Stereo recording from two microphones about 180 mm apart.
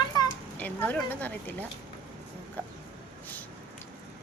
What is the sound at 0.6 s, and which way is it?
Speech, 10° left (ahead or behind).